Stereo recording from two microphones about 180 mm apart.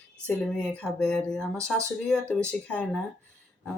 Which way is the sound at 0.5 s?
5° left (ahead or behind).